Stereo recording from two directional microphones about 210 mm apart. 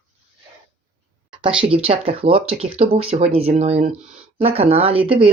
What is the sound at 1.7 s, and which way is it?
Speech, 25° right (ahead or behind).